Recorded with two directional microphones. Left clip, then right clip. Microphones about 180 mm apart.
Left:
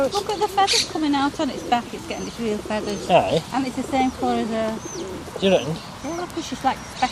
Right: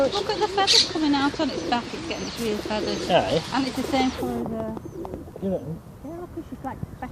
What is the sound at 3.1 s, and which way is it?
Speech, 25° left (ahead or behind).